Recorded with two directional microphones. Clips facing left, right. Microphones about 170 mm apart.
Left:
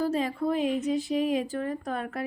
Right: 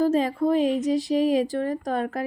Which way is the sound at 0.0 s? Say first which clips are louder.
Right 6 dB; 40° right (ahead or behind).